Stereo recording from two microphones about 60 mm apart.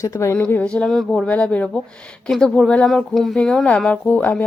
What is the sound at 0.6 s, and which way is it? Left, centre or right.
Speech, centre.